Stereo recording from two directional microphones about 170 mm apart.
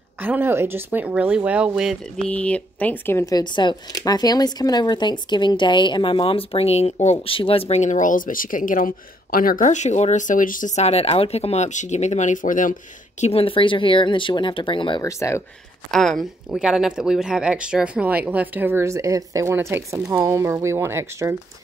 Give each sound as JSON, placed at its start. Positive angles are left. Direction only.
{"t": 0.2, "sound": "speech", "side_deg": -10}
{"t": 2.3, "sound": "speech", "side_deg": 5}
{"t": 13.2, "sound": "speech", "side_deg": 35}
{"t": 15.0, "sound": "speech", "side_deg": 15}
{"t": 15.9, "sound": "speech", "side_deg": 0}